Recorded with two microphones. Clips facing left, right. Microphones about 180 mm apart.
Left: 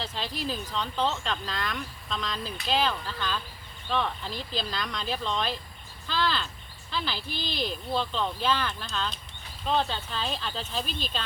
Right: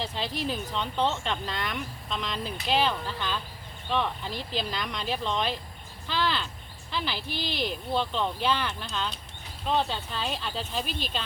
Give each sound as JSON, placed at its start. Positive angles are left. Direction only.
{"t": 0.0, "sound": "speech", "side_deg": -20}